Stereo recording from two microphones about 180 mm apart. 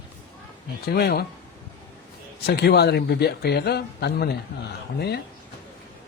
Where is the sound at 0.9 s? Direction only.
60° left (ahead or behind).